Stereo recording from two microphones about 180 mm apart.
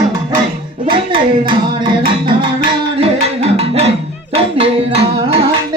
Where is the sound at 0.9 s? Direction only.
30° right (ahead or behind).